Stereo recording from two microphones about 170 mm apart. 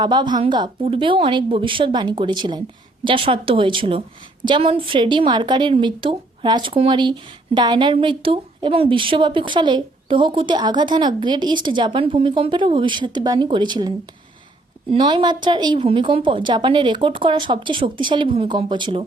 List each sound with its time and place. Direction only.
0.0 s a woman's voice: 25° right (ahead or behind)
14.9 s a woman's voice: 25° right (ahead or behind)